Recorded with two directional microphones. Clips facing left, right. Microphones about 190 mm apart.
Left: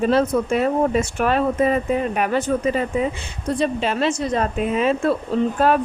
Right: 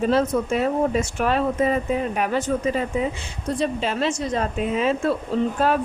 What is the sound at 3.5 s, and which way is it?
Speech, 65° left (ahead or behind).